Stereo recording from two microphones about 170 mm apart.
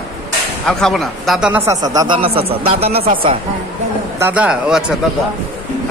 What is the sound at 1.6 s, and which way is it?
Speech, 20° right (ahead or behind).